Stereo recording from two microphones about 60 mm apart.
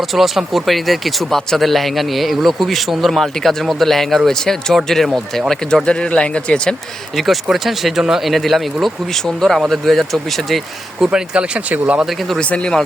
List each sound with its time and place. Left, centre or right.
0.1 s speech: centre
5.8 s speech: centre
7.5 s speech: centre
11.0 s speech: centre
12.4 s speech: centre